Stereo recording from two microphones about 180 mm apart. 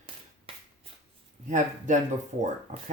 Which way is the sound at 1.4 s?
45° right (ahead or behind).